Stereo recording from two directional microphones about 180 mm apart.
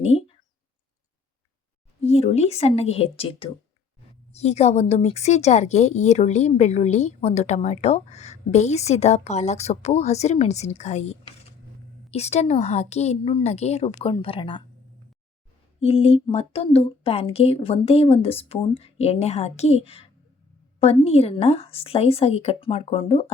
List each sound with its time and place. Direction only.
0.0 s a sound: 35° left (ahead or behind)
2.0 s a woman's voice: 35° left (ahead or behind)
15.8 s a woman's voice: 30° left (ahead or behind)